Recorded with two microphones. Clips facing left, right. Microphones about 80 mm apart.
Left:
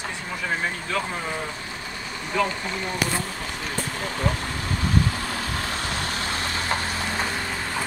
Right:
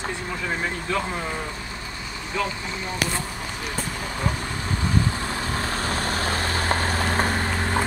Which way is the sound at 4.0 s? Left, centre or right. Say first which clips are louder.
Left 2 dB; centre.